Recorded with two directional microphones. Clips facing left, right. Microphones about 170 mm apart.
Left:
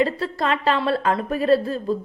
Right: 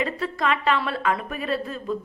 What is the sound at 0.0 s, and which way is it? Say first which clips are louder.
A woman's voice: left 4 dB; 35° left (ahead or behind).